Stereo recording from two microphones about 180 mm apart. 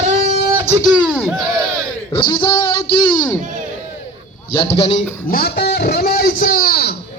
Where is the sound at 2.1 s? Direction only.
25° left (ahead or behind).